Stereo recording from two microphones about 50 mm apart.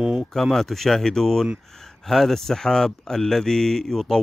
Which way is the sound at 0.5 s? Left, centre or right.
Centre.